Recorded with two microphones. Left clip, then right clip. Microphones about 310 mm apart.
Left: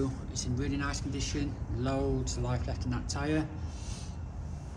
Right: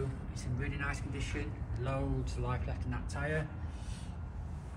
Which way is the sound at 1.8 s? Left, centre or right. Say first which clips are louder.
Left 6 dB; left.